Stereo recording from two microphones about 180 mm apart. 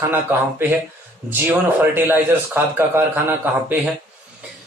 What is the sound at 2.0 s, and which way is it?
A man's voice, 10° right (ahead or behind).